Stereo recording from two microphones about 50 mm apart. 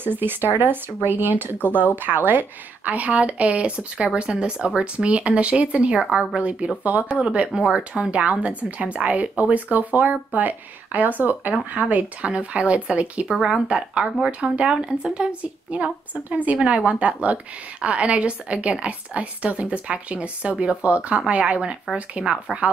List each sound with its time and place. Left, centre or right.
0.0 s speech: right
7.2 s speech: centre